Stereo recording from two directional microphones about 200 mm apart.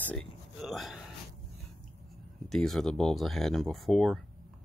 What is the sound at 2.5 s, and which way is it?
Speech, centre (ahead or behind).